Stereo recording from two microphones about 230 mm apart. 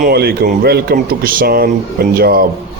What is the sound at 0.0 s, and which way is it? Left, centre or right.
Speech, right.